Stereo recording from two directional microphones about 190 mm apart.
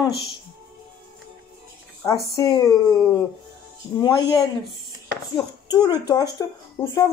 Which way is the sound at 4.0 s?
25° left (ahead or behind).